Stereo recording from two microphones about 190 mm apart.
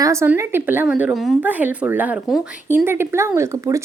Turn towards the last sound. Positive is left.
turn(degrees=-15)  # may be behind; listen again after turning